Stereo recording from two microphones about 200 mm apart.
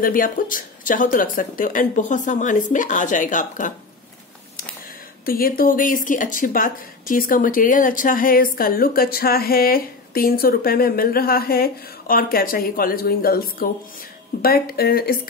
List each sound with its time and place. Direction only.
0.0 s speech: 45° left (ahead or behind)
5.2 s speech: 45° left (ahead or behind)